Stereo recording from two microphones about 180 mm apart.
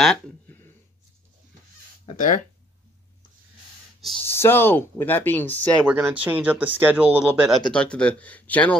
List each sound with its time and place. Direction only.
0.0 s speech: 5° left (ahead or behind)
2.0 s speech: 45° left (ahead or behind)
4.3 s speech: 10° left (ahead or behind)
5.9 s speech: 10° right (ahead or behind); by 8.7 s 10° left (ahead or behind)